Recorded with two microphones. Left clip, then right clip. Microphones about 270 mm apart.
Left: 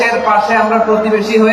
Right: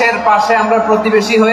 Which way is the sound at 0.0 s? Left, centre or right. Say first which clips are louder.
Right 1 dB; right.